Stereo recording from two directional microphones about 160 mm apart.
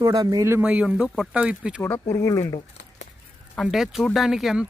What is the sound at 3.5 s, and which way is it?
Speech, centre (ahead or behind).